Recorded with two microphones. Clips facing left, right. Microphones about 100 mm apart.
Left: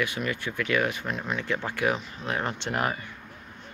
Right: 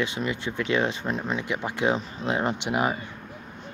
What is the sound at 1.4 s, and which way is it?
Speech, 15° right (ahead or behind).